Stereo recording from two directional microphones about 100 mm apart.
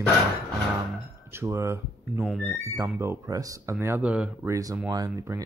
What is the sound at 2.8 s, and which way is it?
Speech, 30° right (ahead or behind).